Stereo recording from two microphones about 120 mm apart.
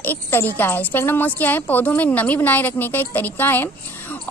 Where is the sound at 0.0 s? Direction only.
15° left (ahead or behind).